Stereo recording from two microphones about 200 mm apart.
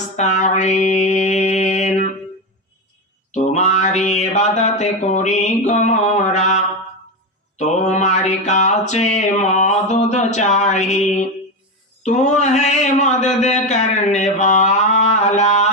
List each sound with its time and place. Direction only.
0.2 s mantra: 35° left (ahead or behind)
3.3 s mantra: 35° left (ahead or behind)
12.0 s speech: 35° left (ahead or behind)